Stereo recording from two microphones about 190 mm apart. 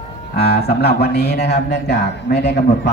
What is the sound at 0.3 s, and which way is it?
A man's voice, 60° left (ahead or behind).